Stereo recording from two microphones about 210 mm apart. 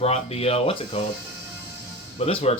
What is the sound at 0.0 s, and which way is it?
Speech, 30° left (ahead or behind).